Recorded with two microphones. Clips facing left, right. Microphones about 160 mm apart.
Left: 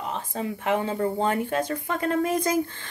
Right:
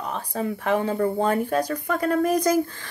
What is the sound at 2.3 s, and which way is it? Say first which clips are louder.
Speech: right 3 dB; 25° left (ahead or behind).